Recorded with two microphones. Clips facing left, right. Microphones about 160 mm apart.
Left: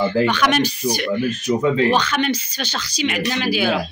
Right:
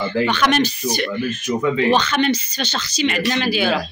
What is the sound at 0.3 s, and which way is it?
Speech, 10° left (ahead or behind).